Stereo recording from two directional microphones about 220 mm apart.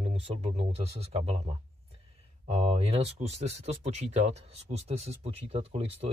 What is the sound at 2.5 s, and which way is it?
Speech, 30° right (ahead or behind).